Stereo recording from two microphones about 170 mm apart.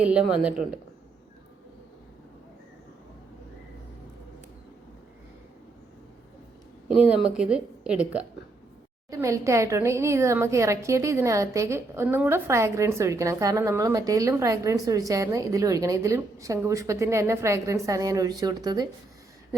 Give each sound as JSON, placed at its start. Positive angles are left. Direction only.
{"t": 0.0, "sound": "speech", "side_deg": -5}
{"t": 6.8, "sound": "a woman's voice", "side_deg": -5}
{"t": 9.0, "sound": "speech", "side_deg": -15}